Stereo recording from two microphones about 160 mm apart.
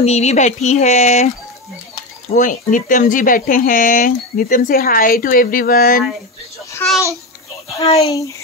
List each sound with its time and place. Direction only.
0.0 s speech: 40° left (ahead or behind)
2.3 s speech: 55° left (ahead or behind)
6.8 s babbling: 10° left (ahead or behind)
7.8 s a child's voice: 40° left (ahead or behind)